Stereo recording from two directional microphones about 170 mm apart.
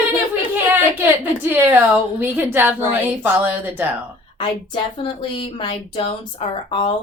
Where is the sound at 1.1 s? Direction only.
10° right (ahead or behind).